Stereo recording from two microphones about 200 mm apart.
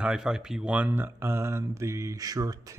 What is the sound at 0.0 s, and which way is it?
Speech, 5° right (ahead or behind).